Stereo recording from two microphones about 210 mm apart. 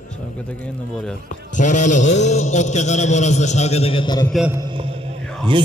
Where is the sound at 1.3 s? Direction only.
35° left (ahead or behind).